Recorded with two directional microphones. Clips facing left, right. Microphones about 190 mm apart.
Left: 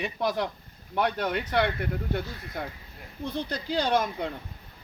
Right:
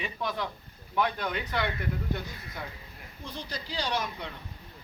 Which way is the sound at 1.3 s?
60° left (ahead or behind).